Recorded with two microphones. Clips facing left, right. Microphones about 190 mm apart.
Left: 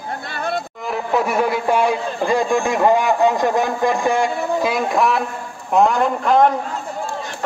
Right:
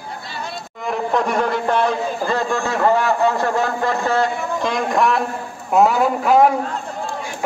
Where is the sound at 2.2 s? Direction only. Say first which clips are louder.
Left 5 dB; 15° left (ahead or behind).